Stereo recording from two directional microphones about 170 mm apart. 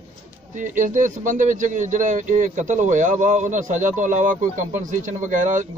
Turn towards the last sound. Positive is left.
turn(degrees=-45)  # may be behind; listen again after turning